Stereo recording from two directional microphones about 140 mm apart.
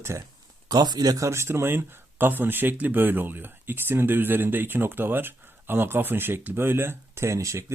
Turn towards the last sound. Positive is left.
turn(degrees=-20)  # may be behind; listen again after turning